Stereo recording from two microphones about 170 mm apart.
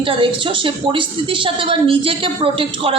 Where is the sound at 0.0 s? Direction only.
30° right (ahead or behind).